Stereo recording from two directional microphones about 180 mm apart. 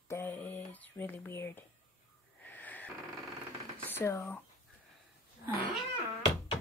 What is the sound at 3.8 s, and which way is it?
Speech, 15° left (ahead or behind).